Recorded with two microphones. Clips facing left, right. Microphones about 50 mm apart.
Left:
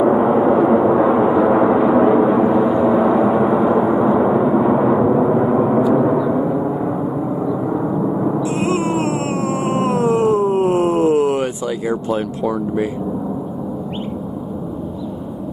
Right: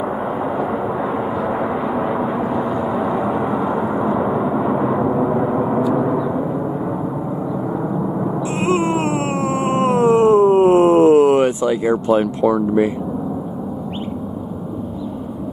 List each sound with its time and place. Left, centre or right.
0.0 s gong: centre
7.7 s gong: centre
8.5 s a sound: right
12.4 s speech: centre